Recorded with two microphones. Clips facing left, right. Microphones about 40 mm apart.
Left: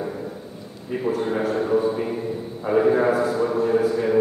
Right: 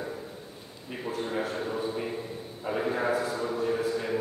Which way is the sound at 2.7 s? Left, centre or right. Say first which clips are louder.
Left 10 dB; left.